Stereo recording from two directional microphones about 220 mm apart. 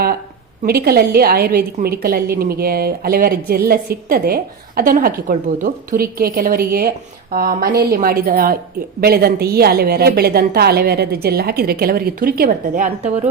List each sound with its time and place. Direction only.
0.6 s a woman's voice: 45° right (ahead or behind)